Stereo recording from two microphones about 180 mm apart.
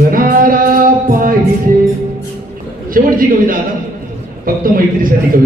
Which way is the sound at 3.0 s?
50° right (ahead or behind).